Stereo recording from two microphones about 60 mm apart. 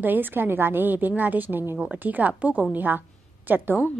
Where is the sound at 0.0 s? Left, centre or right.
Right.